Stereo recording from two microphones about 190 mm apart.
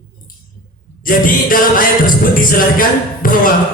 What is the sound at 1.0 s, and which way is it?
Speech, 45° left (ahead or behind).